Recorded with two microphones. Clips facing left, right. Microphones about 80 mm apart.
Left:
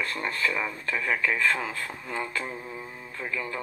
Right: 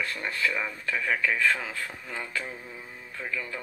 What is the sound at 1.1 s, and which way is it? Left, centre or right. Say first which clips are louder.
Speech: even; left.